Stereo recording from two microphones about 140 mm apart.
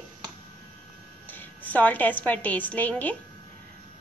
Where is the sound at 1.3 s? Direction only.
10° left (ahead or behind).